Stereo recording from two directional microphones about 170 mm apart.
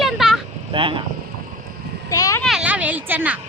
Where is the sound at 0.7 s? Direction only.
30° right (ahead or behind).